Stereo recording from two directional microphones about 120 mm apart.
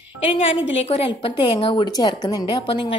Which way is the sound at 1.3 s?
40° left (ahead or behind).